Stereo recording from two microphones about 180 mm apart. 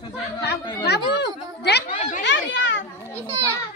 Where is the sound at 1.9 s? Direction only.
45° left (ahead or behind).